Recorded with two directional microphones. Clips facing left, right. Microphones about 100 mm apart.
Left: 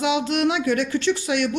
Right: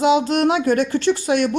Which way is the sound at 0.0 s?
40° right (ahead or behind).